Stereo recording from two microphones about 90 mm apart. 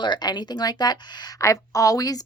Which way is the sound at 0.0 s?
55° left (ahead or behind).